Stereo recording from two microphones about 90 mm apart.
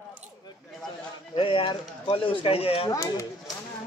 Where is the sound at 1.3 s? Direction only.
80° left.